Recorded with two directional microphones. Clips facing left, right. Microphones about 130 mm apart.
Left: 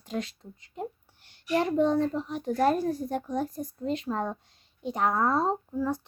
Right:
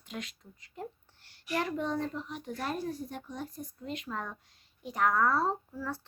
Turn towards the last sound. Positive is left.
turn(degrees=20)  # may be behind; listen again after turning